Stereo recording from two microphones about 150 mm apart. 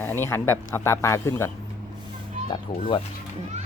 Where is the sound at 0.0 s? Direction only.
15° left (ahead or behind).